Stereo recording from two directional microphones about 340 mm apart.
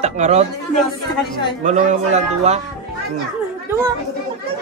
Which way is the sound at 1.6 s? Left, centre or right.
Right.